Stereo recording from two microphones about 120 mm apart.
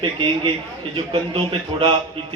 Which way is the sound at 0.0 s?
45° right (ahead or behind).